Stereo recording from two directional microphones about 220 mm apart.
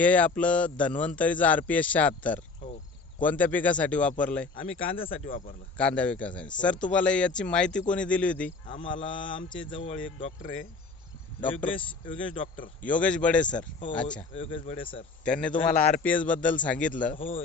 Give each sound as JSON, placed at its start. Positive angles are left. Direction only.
{"t": 0.0, "sound": "a man's voice", "side_deg": 5}
{"t": 4.8, "sound": "speech", "side_deg": 25}
{"t": 5.7, "sound": "speech", "side_deg": 5}
{"t": 8.6, "sound": "speech", "side_deg": 20}
{"t": 12.8, "sound": "speech", "side_deg": 5}
{"t": 14.3, "sound": "speech", "side_deg": 25}
{"t": 15.2, "sound": "a man's voice", "side_deg": 5}